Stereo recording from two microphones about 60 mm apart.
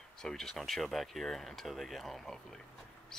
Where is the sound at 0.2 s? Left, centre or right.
Centre.